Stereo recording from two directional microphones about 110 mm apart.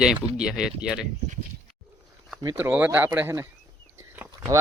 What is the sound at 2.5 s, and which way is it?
Speech, 20° right (ahead or behind).